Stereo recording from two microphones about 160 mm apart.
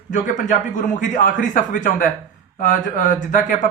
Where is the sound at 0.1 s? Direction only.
55° left (ahead or behind).